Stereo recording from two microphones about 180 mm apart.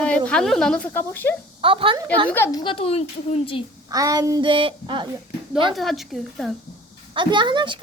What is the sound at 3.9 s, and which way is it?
A child's voice, 20° right (ahead or behind).